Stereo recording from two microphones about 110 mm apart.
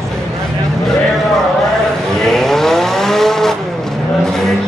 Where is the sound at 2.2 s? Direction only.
5° left (ahead or behind).